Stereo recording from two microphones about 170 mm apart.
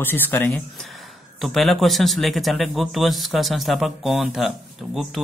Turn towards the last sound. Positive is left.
turn(degrees=0)  # may be behind; listen again after turning